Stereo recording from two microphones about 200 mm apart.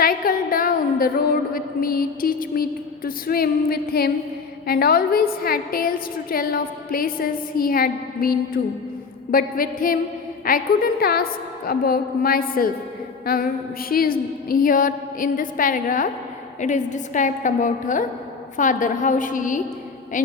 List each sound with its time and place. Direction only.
0.0 s a woman's voice: 45° left (ahead or behind)